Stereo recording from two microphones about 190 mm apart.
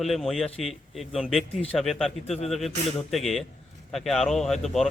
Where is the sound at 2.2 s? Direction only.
35° left (ahead or behind).